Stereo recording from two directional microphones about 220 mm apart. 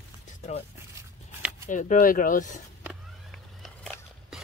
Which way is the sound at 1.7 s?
35° left (ahead or behind).